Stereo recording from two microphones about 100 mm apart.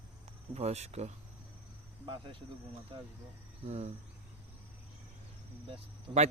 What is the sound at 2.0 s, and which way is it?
Speech, 55° right (ahead or behind).